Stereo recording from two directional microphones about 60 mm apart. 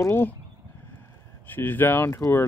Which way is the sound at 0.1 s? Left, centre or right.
Left.